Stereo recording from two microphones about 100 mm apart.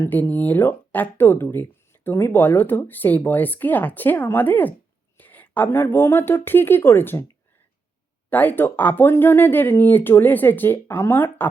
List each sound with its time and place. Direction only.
0.0 s a woman's voice: 20° left (ahead or behind)
8.3 s speech: 20° left (ahead or behind)